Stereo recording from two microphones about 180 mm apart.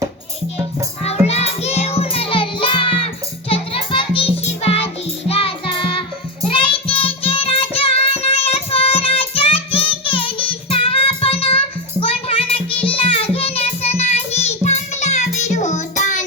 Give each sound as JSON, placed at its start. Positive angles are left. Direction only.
{"t": 1.0, "sound": "music", "side_deg": 35}